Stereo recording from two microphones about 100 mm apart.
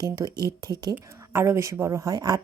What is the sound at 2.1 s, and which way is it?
Speech, 40° right (ahead or behind).